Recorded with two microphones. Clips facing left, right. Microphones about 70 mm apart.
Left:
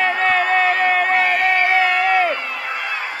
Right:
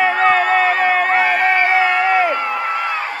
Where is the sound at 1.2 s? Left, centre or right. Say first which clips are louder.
Right 2 dB; right.